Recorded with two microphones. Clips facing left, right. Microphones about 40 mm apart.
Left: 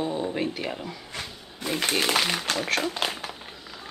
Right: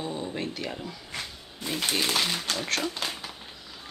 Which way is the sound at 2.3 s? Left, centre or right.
Left.